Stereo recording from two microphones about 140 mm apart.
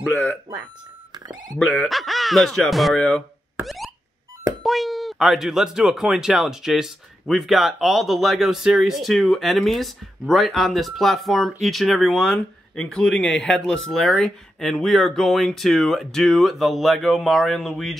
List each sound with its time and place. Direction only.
1.1 s a sound: 30° right (ahead or behind)
1.7 s speech: centre (ahead or behind)
3.6 s car alarm: centre (ahead or behind)
4.6 s speech: centre (ahead or behind)